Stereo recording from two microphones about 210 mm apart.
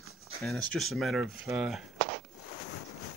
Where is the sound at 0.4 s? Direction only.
5° left (ahead or behind).